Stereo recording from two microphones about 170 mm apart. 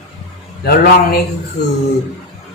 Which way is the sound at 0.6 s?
65° left (ahead or behind).